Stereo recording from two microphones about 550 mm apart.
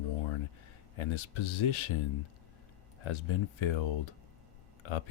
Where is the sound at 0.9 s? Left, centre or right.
Left.